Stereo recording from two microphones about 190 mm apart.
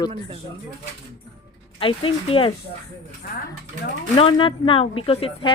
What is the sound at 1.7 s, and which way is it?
Speech, 30° left (ahead or behind).